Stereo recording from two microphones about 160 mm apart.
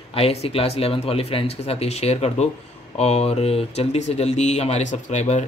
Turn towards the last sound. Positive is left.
turn(degrees=45)  # may be behind; listen again after turning